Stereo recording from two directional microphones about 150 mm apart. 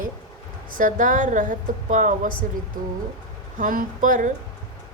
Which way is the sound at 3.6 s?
65° right (ahead or behind).